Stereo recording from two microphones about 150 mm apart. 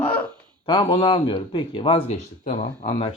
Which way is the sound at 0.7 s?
30° left (ahead or behind).